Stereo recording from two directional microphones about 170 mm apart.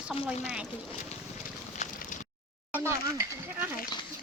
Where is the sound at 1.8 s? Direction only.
45° left (ahead or behind).